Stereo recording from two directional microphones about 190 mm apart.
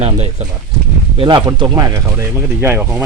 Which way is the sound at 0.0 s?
30° right (ahead or behind).